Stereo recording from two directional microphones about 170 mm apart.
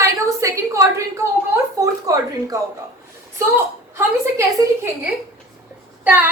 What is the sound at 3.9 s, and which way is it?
A woman's voice, 15° right (ahead or behind).